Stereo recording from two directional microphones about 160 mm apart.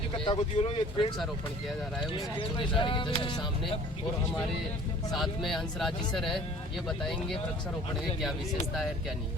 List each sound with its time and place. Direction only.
0.3 s speech: 35° left (ahead or behind)
2.4 s speech: 30° left (ahead or behind)
5.1 s speech: centre (ahead or behind)